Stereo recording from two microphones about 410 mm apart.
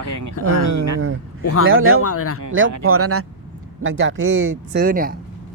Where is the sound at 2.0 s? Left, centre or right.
Left.